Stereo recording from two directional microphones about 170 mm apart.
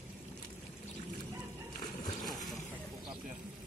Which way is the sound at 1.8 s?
25° left (ahead or behind).